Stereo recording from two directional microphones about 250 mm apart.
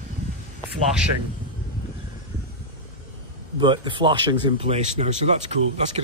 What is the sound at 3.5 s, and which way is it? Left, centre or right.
Speech, centre.